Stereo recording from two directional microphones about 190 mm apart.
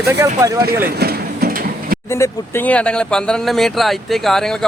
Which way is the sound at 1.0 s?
50° right (ahead or behind).